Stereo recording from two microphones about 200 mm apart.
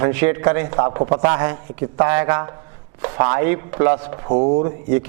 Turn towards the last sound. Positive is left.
turn(degrees=-20)  # may be behind; listen again after turning